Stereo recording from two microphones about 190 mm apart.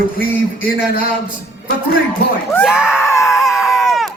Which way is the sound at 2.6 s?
5° right (ahead or behind).